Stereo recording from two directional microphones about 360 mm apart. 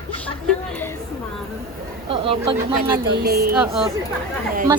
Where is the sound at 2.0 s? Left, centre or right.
Centre.